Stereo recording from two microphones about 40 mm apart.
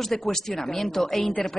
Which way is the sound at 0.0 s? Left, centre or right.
Centre.